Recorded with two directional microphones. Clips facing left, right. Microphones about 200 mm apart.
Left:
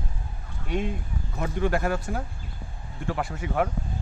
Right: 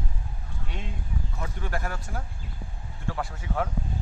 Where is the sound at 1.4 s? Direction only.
75° left (ahead or behind).